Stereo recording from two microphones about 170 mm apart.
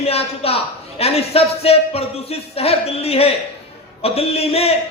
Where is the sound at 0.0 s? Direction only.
35° left (ahead or behind).